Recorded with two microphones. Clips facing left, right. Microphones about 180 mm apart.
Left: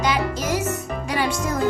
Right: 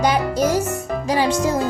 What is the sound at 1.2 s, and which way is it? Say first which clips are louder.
Music: right 5 dB; 30° right (ahead or behind).